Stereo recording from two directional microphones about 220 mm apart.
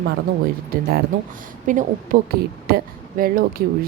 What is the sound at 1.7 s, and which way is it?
Speech, 35° right (ahead or behind).